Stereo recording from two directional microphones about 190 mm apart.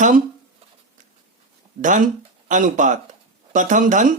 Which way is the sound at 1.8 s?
40° right (ahead or behind).